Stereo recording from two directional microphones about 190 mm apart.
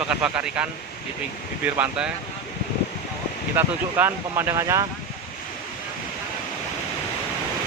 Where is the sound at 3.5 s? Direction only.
10° right (ahead or behind).